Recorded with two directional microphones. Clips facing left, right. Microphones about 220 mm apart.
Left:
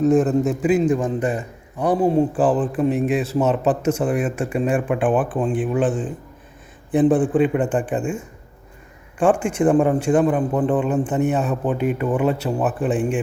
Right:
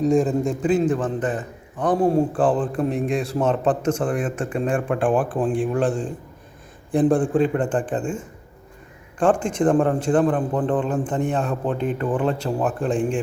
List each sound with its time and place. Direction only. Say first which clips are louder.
0.0 s a man's voice: left 2 dB; 5° left (ahead or behind)